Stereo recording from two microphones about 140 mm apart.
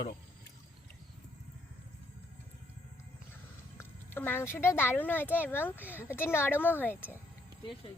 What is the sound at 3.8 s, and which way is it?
Speech, 15° left (ahead or behind).